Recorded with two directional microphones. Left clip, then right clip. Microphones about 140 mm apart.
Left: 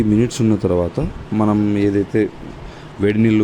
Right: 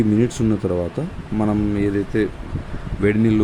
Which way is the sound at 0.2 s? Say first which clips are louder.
Left 3 dB; 10° left (ahead or behind).